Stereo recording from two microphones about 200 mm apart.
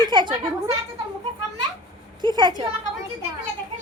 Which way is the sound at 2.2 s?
20° right (ahead or behind).